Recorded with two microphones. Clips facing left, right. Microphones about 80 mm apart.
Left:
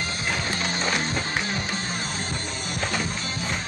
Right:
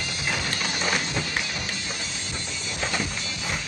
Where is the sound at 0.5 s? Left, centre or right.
Left.